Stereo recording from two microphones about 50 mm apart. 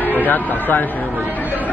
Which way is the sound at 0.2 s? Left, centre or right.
Left.